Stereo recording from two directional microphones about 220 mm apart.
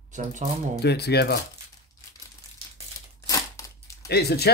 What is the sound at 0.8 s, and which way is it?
Speech, 50° left (ahead or behind).